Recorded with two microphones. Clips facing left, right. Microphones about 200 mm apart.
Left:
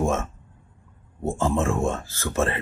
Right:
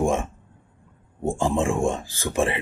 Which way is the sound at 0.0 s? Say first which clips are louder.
Right 2 dB; 15° right (ahead or behind).